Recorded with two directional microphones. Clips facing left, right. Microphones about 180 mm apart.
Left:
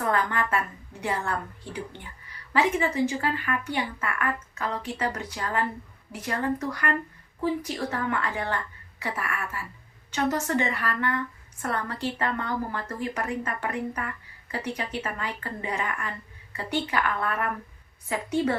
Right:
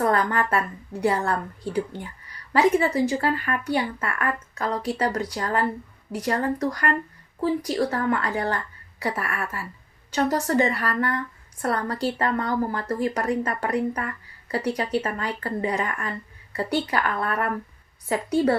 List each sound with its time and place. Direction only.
0.0 s a woman's voice: 40° right (ahead or behind)